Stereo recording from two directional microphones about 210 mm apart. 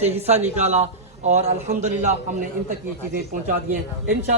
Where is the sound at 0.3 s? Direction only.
30° right (ahead or behind).